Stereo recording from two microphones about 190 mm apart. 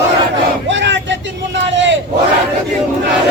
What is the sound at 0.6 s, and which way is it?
Vehicle, 75° right (ahead or behind).